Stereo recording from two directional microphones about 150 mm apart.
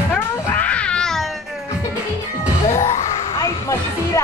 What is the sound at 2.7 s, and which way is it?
Music, 50° left (ahead or behind).